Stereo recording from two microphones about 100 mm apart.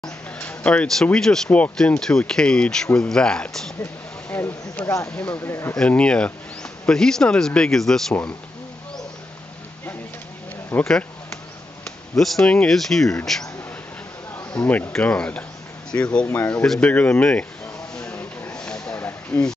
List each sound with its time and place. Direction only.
0.4 s speech: 15° left (ahead or behind)
3.8 s a sound: 20° left (ahead or behind)
5.1 s speech: 15° left (ahead or behind)
5.4 s speech: 25° left (ahead or behind)
5.8 s speech: 10° left (ahead or behind)
10.7 s speech: 15° left (ahead or behind)
12.2 s speech: 5° left (ahead or behind)
14.3 s bee: 20° left (ahead or behind)
14.9 s speech: 10° left (ahead or behind)
16.6 s speech: 5° left (ahead or behind)
16.9 s speech: 15° left (ahead or behind)
17.9 s a sound: 10° left (ahead or behind)